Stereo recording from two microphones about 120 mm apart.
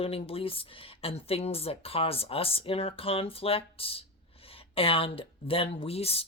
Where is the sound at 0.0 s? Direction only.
55° left (ahead or behind).